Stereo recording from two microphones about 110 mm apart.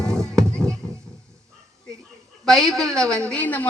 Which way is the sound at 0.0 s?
5° left (ahead or behind).